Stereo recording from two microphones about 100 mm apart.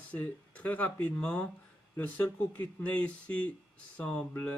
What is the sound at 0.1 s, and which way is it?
Speech, 15° left (ahead or behind).